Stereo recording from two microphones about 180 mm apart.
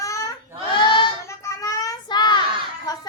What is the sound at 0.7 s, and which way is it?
Child singing, 25° left (ahead or behind).